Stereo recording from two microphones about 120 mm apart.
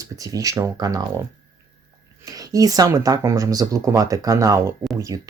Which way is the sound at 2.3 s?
30° right (ahead or behind).